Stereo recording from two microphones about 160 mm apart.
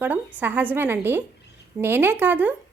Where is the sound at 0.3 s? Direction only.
10° right (ahead or behind).